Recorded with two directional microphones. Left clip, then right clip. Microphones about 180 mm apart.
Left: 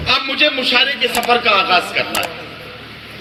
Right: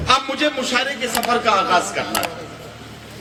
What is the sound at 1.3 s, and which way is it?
Speech, 45° right (ahead or behind).